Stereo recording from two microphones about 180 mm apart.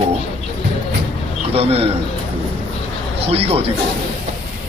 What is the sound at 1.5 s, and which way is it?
Speech, 35° right (ahead or behind).